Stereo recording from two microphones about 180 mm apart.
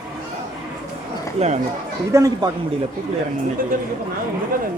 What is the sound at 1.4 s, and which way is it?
Speech, 40° right (ahead or behind).